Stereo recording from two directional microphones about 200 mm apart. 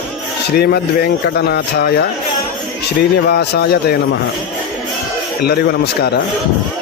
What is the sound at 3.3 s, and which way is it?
Speech, 55° left (ahead or behind).